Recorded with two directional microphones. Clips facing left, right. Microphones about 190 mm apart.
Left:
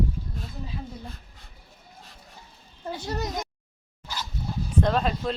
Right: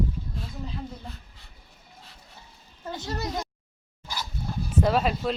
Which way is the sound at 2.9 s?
15° left (ahead or behind).